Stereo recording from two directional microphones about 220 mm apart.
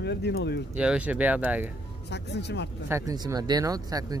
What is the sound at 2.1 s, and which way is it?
Speech, 50° left (ahead or behind).